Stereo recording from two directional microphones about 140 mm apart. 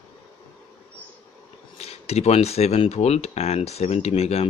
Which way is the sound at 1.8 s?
50° left (ahead or behind).